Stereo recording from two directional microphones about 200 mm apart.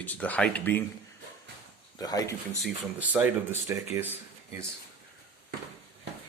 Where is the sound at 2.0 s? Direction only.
20° left (ahead or behind).